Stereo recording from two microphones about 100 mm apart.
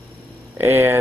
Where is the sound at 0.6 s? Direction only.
20° right (ahead or behind).